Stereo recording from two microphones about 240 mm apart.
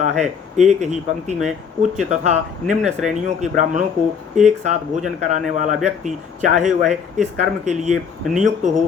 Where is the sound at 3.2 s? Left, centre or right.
Right.